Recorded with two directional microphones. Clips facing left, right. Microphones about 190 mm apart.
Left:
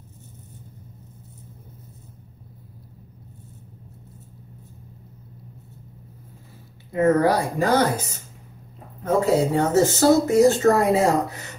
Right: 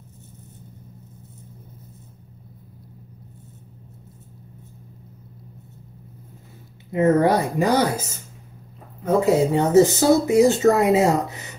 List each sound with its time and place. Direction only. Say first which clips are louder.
6.9 s speech: right 1 dB; 25° right (ahead or behind)
9.0 s speech: right 2 dB; 15° right (ahead or behind)